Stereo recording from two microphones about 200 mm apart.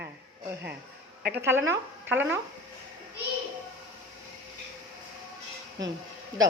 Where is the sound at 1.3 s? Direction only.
10° right (ahead or behind).